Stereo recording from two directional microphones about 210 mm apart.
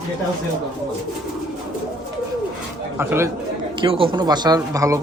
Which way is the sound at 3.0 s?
10° right (ahead or behind).